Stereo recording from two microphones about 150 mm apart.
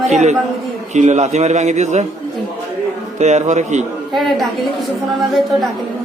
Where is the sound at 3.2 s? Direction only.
50° right (ahead or behind).